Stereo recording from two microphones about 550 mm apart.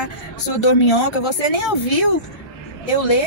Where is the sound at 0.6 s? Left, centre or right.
Left.